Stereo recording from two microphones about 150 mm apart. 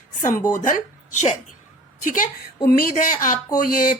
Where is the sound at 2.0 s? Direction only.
60° left (ahead or behind).